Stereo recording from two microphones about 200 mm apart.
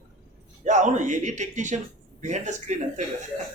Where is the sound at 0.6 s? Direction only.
35° right (ahead or behind).